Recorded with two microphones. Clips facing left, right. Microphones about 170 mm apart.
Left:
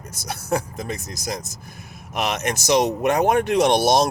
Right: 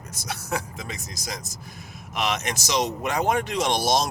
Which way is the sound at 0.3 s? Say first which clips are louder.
Left 6 dB; 50° left (ahead or behind).